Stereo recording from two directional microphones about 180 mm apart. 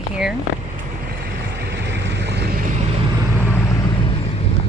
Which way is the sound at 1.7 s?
75° right (ahead or behind).